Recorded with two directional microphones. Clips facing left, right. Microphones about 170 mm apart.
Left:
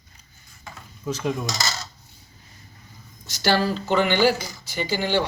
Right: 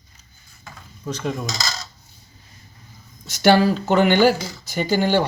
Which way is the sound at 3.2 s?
55° right (ahead or behind).